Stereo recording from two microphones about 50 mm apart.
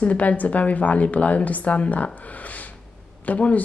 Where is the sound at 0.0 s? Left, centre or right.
Left.